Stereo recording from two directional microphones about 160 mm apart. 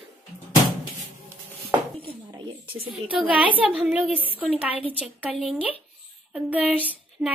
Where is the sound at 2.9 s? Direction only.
5° right (ahead or behind).